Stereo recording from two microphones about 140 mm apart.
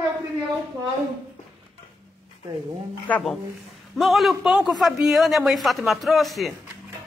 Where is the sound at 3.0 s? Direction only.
10° left (ahead or behind).